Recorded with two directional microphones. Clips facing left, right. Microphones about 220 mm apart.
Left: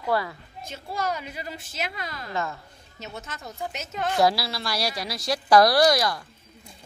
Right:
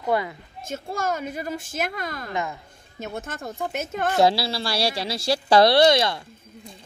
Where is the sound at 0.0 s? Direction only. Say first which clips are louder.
Right 2 dB; 20° right (ahead or behind).